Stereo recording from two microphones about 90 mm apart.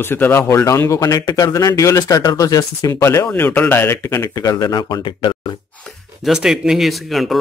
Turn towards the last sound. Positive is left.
turn(degrees=0)  # may be behind; listen again after turning